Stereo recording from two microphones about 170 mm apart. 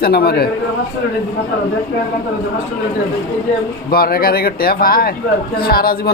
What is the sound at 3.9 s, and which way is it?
Speech, 60° left (ahead or behind).